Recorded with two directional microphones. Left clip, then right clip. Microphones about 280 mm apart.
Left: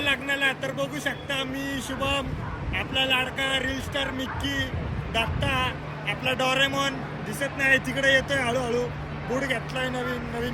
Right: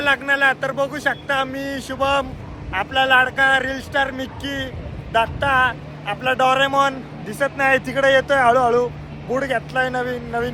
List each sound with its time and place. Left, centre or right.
0.0 s speech: centre